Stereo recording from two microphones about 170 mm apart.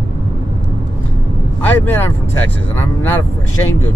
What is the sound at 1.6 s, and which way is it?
Speech, 10° left (ahead or behind).